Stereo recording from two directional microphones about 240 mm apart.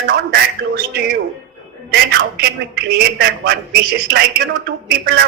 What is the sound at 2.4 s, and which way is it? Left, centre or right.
Speech, right.